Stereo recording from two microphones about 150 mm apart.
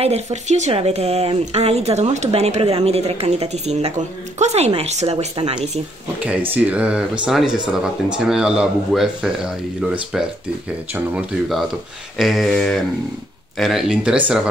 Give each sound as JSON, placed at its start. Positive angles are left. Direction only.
{"t": 0.0, "sound": "speech", "side_deg": -45}
{"t": 6.2, "sound": "speech", "side_deg": -10}